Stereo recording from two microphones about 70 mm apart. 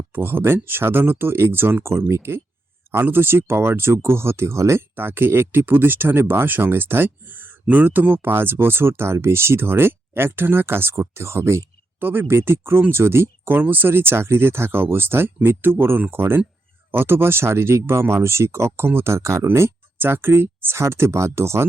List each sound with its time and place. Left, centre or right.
0.1 s speech: right
4.9 s speech: right
11.9 s speech: right